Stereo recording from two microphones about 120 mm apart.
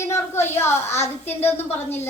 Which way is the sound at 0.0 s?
20° left (ahead or behind).